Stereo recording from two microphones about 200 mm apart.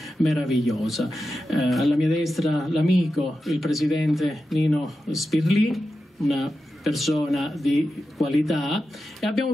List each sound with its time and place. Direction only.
0.0 s speech: centre (ahead or behind)